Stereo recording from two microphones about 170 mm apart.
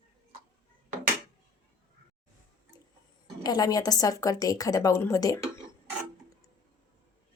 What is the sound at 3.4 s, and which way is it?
A woman's voice, 20° left (ahead or behind).